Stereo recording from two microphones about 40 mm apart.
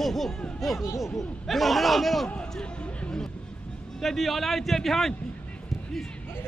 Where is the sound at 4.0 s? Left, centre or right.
Centre.